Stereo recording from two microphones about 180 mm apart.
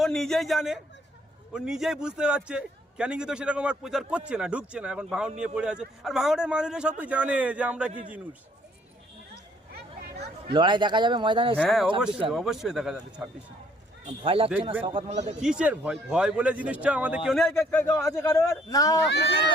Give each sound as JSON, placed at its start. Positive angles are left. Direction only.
{"t": 0.0, "sound": "a man's voice", "side_deg": 0}
{"t": 10.5, "sound": "speech", "side_deg": -25}
{"t": 11.6, "sound": "a man's voice", "side_deg": 0}
{"t": 14.2, "sound": "speech", "side_deg": -30}
{"t": 15.4, "sound": "a man's voice", "side_deg": -5}
{"t": 17.9, "sound": "a man's voice", "side_deg": 15}